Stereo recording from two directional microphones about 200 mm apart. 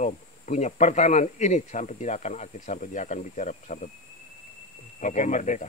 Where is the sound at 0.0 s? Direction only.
35° left (ahead or behind).